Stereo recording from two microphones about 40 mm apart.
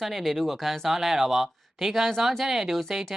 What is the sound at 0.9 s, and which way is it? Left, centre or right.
Speech, centre.